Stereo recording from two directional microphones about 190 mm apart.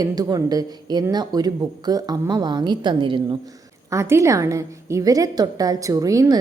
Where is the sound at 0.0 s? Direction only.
20° right (ahead or behind).